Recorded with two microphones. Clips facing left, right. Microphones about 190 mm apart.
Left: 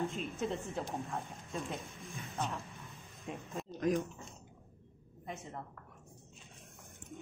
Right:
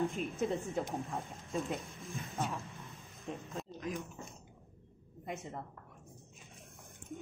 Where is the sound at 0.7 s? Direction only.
15° right (ahead or behind).